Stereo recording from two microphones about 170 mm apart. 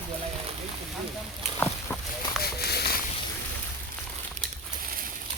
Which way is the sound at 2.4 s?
70° left (ahead or behind).